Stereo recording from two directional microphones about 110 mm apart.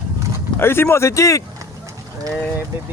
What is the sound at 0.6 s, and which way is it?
Speech, 20° left (ahead or behind).